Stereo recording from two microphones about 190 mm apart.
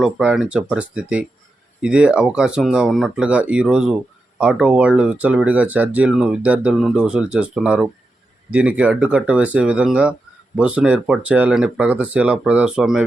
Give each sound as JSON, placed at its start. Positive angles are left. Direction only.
{"t": 0.0, "sound": "speech", "side_deg": -5}